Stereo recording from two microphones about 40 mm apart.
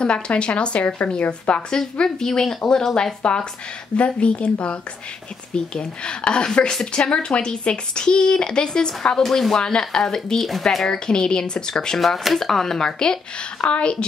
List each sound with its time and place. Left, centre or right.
0.0 s speech: left
0.8 s a woman's voice: left
1.7 s speech: centre
5.5 s speech: left
9.2 s speech: centre
9.5 s speech: centre
10.9 s speech: centre
13.7 s speech: left